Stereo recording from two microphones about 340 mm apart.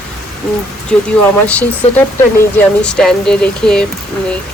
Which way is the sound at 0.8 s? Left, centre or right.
Centre.